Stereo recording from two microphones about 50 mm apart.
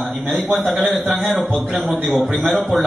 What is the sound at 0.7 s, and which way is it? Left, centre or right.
Speech, right.